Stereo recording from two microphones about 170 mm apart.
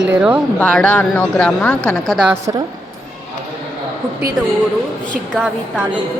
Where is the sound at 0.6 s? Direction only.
10° left (ahead or behind).